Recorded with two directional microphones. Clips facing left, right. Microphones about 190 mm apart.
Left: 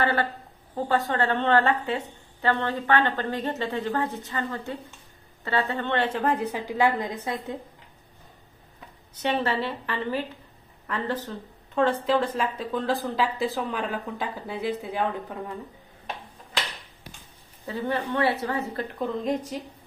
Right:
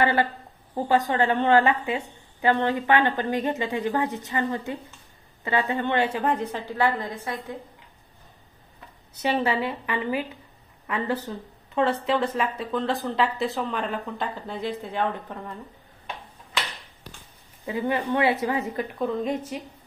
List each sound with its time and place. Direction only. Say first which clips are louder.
0.0 s a woman's voice: right 2 dB; 15° right (ahead or behind); by 7.5 s 20° left (ahead or behind)
9.2 s a woman's voice: right 2 dB; 10° right (ahead or behind); by 15.5 s 10° left (ahead or behind)
17.6 s speech: right 3 dB; 15° right (ahead or behind)